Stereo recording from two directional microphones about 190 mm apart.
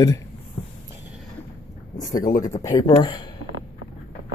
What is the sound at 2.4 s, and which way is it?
Speech, 15° left (ahead or behind).